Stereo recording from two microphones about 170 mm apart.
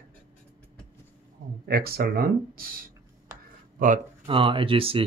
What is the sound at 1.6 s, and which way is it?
Speech, 65° right (ahead or behind).